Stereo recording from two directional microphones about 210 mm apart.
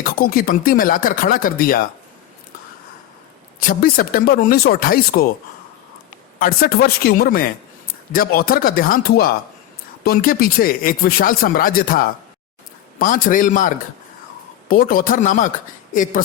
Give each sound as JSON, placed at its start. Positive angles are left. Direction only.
{"t": 0.0, "sound": "speech", "side_deg": 45}
{"t": 3.6, "sound": "speech", "side_deg": 45}
{"t": 6.4, "sound": "a man's voice", "side_deg": 45}